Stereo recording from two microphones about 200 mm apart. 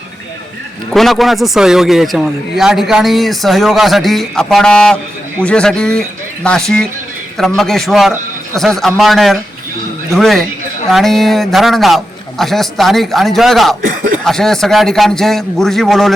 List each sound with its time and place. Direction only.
0.9 s a man's voice: centre (ahead or behind)
13.8 s speech: 40° right (ahead or behind)
14.3 s a man's voice: centre (ahead or behind)